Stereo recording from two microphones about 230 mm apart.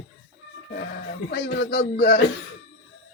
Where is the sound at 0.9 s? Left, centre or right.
Left.